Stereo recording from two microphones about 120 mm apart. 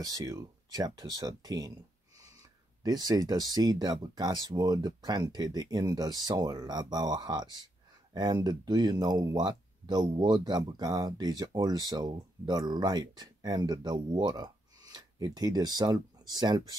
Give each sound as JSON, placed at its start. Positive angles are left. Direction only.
{"t": 0.0, "sound": "speech", "side_deg": -30}
{"t": 2.8, "sound": "speech", "side_deg": -35}